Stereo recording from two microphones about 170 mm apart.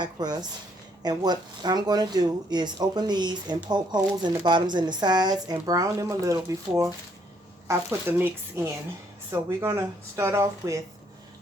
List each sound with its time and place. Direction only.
0.0 s speech: 25° right (ahead or behind)